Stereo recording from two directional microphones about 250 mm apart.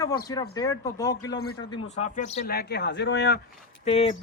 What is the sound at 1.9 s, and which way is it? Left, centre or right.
Speech, left.